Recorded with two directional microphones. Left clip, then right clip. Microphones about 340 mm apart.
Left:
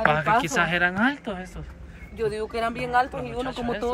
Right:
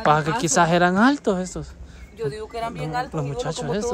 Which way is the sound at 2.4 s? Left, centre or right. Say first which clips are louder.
Left 2 dB; left.